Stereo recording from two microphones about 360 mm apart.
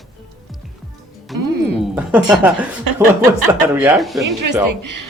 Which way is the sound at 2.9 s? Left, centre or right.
Right.